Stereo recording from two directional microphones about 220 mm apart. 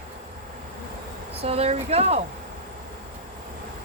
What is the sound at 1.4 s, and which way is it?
Speech, 25° right (ahead or behind).